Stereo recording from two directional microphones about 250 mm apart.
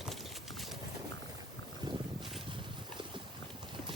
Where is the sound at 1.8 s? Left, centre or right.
Centre.